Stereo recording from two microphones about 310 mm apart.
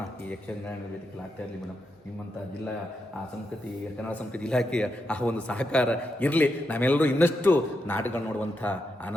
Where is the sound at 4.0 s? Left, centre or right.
Centre.